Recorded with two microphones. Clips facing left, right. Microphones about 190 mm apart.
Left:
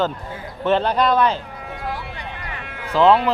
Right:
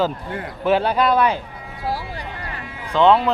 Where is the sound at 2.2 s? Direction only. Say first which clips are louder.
Right 1 dB; 65° left (ahead or behind).